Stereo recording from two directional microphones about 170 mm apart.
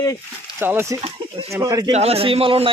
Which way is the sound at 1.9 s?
35° right (ahead or behind).